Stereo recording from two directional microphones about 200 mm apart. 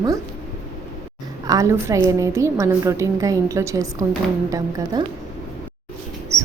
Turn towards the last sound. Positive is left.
turn(degrees=-15)  # may be behind; listen again after turning